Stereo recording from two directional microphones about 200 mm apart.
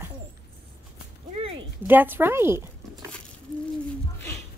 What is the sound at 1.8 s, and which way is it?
Speech, 10° right (ahead or behind).